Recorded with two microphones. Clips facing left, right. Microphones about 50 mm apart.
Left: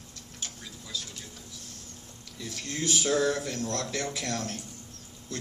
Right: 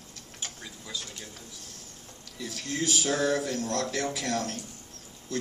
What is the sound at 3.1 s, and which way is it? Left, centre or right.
Speech, right.